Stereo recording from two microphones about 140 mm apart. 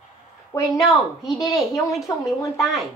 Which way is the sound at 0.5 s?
20° left (ahead or behind).